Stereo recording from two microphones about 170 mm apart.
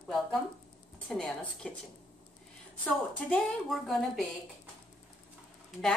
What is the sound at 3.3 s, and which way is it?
Speech, centre (ahead or behind).